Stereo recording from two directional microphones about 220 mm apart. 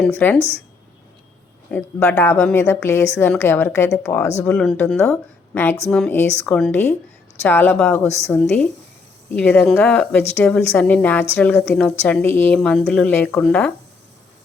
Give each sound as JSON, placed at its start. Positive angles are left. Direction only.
{"t": 0.1, "sound": "a woman's voice", "side_deg": 10}
{"t": 0.3, "sound": "speech", "side_deg": 30}
{"t": 1.7, "sound": "a woman's voice", "side_deg": 10}